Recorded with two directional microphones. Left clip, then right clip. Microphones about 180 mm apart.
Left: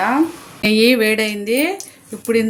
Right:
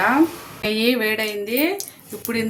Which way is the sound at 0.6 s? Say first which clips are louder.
Left 6 dB; 50° left (ahead or behind).